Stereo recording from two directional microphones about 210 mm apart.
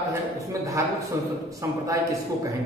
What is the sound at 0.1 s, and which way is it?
A man's voice, 15° right (ahead or behind).